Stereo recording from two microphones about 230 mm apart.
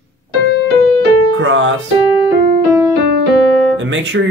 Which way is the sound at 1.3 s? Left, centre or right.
Right.